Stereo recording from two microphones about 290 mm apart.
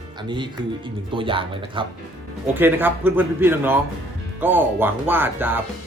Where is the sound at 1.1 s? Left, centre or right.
Centre.